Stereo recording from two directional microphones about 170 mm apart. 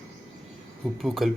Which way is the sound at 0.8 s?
Centre (ahead or behind).